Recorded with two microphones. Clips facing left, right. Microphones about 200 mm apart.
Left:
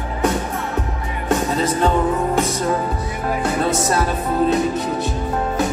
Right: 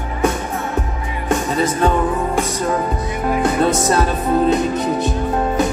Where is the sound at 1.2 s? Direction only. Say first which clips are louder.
Right 1 dB; 15° right (ahead or behind).